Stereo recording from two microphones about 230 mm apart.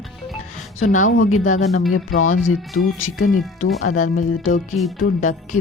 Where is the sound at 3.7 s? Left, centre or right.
Left.